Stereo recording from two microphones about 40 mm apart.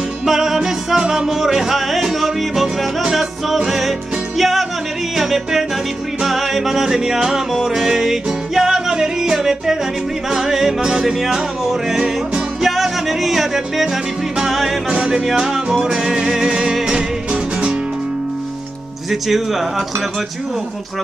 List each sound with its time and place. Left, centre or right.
0.3 s music: centre
14.9 s music: right
19.0 s speech: centre